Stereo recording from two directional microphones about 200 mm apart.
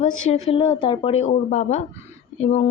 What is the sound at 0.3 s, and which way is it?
A woman's voice, 30° left (ahead or behind).